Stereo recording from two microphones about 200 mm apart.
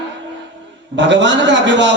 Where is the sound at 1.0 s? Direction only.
65° right (ahead or behind).